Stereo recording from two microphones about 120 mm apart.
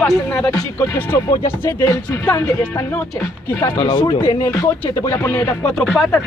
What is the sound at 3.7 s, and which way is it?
Speech, 35° left (ahead or behind).